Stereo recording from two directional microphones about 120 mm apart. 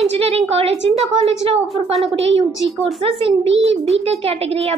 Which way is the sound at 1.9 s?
55° right (ahead or behind).